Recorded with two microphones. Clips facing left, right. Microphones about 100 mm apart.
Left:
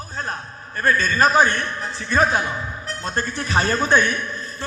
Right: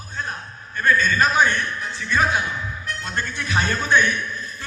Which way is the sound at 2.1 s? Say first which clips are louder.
Left 2 dB; 35° left (ahead or behind).